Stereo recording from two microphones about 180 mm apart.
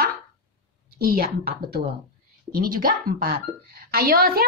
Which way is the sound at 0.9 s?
55° right (ahead or behind).